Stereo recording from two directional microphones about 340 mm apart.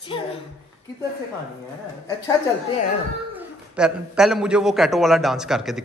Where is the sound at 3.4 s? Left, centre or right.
Centre.